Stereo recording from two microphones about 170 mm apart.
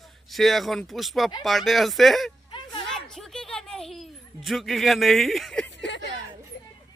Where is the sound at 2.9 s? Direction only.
Centre (ahead or behind).